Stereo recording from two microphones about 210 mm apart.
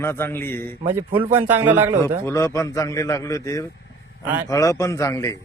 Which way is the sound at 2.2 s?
15° left (ahead or behind).